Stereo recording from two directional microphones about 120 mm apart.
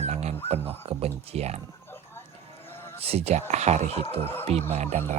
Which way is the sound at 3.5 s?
75° right (ahead or behind).